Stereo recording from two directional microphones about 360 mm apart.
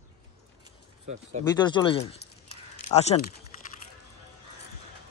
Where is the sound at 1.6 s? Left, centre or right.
Centre.